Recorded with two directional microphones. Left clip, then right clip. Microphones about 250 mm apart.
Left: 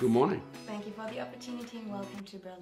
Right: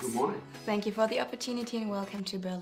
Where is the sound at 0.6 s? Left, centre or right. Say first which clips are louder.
Right 11 dB; right.